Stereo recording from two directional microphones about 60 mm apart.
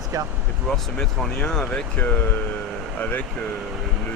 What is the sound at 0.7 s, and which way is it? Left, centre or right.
Speech, centre.